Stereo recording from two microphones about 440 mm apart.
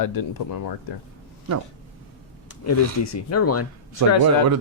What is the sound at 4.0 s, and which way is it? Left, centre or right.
Speech, right.